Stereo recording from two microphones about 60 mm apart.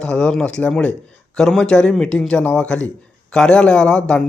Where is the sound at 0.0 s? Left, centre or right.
Centre.